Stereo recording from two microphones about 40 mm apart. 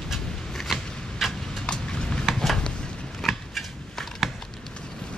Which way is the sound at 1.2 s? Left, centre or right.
Centre.